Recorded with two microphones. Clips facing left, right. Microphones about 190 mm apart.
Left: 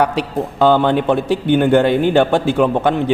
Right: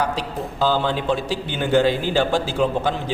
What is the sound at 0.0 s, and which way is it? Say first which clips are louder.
A man's voice: left 7 dB; 65° left (ahead or behind).